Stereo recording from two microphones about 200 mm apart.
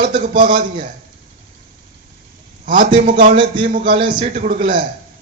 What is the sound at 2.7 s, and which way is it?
A man's voice, 40° right (ahead or behind).